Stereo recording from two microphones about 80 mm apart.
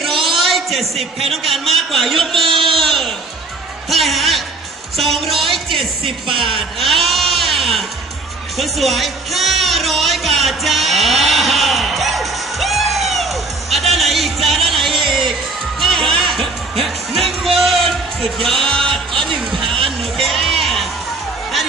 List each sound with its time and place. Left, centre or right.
0.0 s a man's voice: centre
2.4 s speech: right
2.7 s a sound: centre
3.9 s a man's voice: centre
6.4 s a sound: centre
8.5 s music: centre
20.2 s music: centre